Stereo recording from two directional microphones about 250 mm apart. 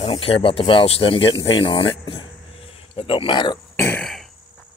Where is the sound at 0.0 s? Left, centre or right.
Left; by 4.3 s centre.